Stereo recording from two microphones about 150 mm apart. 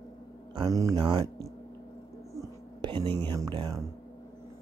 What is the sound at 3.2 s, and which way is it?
Speech, 30° right (ahead or behind).